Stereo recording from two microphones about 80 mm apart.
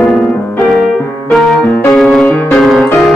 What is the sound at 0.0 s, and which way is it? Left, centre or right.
Music, centre.